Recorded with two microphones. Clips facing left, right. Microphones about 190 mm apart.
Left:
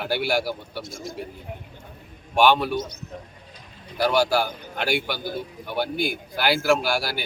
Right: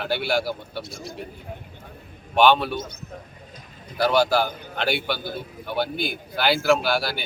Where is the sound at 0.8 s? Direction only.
45° left (ahead or behind).